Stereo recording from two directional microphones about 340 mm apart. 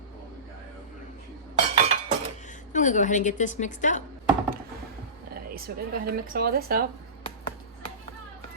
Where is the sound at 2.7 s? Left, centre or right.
Left.